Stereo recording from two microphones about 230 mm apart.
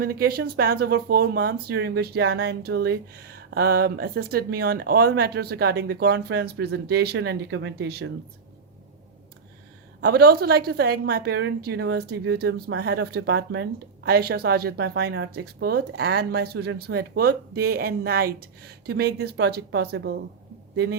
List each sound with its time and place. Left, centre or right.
0.0 s speech: right
10.0 s speech: right